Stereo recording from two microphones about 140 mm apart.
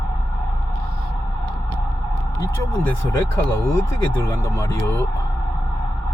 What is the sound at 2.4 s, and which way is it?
Speech, 15° left (ahead or behind).